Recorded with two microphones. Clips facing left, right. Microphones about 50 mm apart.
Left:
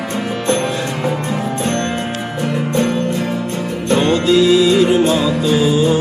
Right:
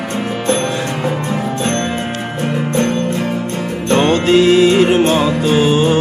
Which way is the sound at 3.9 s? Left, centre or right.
Right.